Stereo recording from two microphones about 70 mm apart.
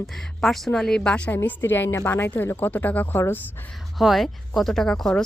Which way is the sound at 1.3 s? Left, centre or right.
Left.